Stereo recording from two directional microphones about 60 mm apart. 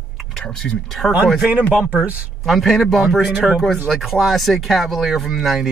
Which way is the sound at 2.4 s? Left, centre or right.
Centre.